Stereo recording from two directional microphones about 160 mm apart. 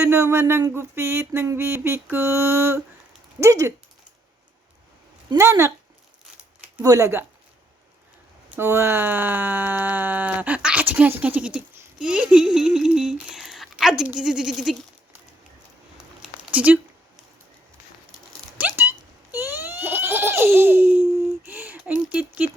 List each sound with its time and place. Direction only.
0.0 s speech: 15° right (ahead or behind)
5.4 s speech: 15° right (ahead or behind)
6.8 s speech: 20° right (ahead or behind)
8.4 s speech: 15° right (ahead or behind)
16.2 s a sound: 5° right (ahead or behind)
18.5 s giggle: 10° right (ahead or behind)
21.4 s a sound: 10° right (ahead or behind)